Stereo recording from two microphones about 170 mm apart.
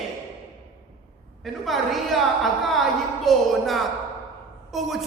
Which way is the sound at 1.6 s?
Centre (ahead or behind).